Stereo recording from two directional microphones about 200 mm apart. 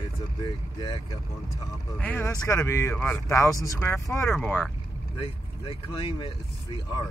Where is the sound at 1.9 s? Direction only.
10° left (ahead or behind).